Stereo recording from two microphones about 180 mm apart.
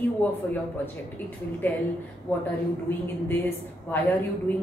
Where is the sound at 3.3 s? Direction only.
10° left (ahead or behind).